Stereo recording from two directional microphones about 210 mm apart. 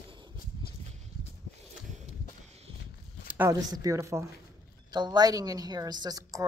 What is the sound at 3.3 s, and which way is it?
A woman's voice, 15° right (ahead or behind).